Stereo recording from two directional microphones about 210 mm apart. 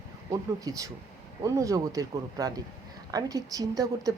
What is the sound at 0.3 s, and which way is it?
A woman's voice, 15° right (ahead or behind).